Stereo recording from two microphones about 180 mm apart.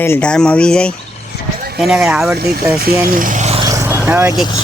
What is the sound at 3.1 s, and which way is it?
Vehicle, 50° right (ahead or behind).